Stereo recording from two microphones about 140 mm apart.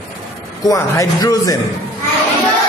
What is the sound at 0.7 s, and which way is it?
Speech, 25° left (ahead or behind).